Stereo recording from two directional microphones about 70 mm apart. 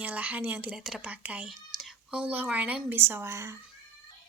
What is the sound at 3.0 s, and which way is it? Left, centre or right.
Speech, right.